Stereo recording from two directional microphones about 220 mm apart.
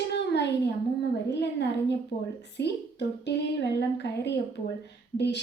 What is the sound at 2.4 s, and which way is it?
A woman's voice, 50° left (ahead or behind).